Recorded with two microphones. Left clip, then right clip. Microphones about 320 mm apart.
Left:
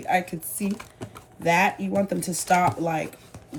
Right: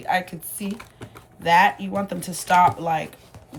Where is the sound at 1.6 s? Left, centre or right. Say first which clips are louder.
Right 6 dB; centre.